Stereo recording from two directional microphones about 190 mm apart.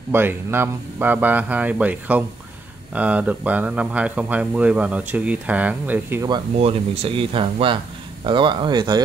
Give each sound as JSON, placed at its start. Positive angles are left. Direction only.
{"t": 0.1, "sound": "speech", "side_deg": -10}
{"t": 6.2, "sound": "speech", "side_deg": -25}